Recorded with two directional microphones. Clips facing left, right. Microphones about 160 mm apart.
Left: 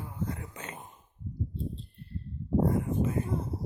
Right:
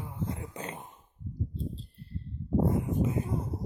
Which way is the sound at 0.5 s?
35° right (ahead or behind).